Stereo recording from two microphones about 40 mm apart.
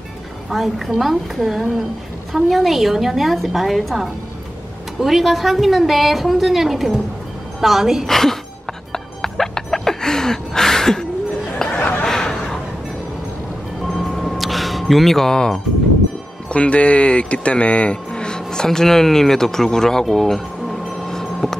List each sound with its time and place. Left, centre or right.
0.5 s a woman's voice: centre
8.1 s speech: centre
8.9 s music: centre
11.7 s a sound: left
12.1 s a sound: centre
13.8 s music: centre
15.3 s speech: centre
16.4 s speech: left; by 21.5 s centre